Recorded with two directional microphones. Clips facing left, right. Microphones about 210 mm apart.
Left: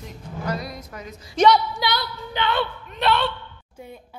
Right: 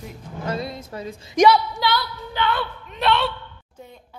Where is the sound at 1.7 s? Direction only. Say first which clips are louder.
Right 2 dB; 20° left (ahead or behind).